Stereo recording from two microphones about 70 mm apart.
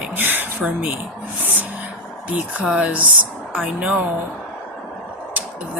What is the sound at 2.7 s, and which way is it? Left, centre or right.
A woman's voice, right.